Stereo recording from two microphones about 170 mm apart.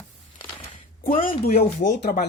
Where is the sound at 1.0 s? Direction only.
55° left (ahead or behind); by 2.3 s 70° left (ahead or behind).